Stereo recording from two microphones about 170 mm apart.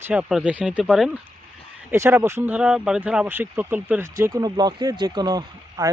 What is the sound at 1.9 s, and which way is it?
Speech, 15° right (ahead or behind).